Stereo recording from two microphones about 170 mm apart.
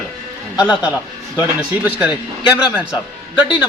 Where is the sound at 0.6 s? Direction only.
5° right (ahead or behind).